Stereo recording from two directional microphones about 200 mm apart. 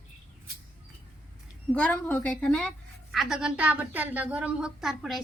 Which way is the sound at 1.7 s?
5° left (ahead or behind).